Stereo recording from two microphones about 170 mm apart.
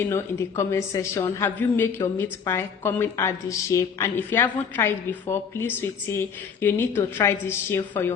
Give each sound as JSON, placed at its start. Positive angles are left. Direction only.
{"t": 0.0, "sound": "a woman's voice", "side_deg": 15}